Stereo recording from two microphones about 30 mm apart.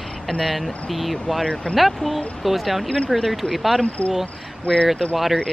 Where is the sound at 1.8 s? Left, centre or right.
Centre.